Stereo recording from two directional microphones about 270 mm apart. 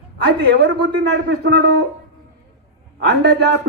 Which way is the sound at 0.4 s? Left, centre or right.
Right.